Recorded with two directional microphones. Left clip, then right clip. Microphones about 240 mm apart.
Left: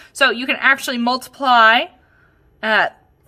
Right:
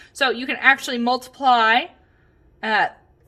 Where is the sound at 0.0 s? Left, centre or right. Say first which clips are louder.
Left 5 dB; left.